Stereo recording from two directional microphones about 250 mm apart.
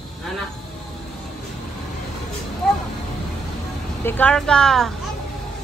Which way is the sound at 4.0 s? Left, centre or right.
Centre.